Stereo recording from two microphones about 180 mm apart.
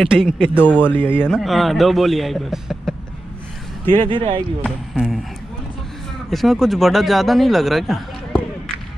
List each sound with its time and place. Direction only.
0.0 s speech: 5° right (ahead or behind)
0.6 s speech: 10° left (ahead or behind)
1.3 s speech: centre (ahead or behind)
3.9 s speech: 30° right (ahead or behind)
4.6 s speech: centre (ahead or behind)
6.3 s speech: centre (ahead or behind)